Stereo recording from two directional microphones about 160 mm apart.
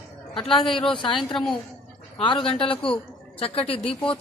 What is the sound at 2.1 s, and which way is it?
A man's voice, 35° left (ahead or behind).